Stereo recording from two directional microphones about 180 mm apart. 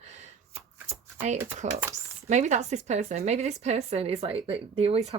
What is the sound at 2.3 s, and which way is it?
A woman's voice, 40° right (ahead or behind).